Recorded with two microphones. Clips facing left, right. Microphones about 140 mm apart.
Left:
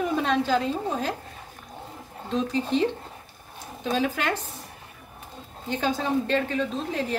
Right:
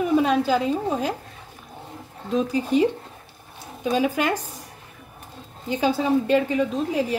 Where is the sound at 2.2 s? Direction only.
10° right (ahead or behind).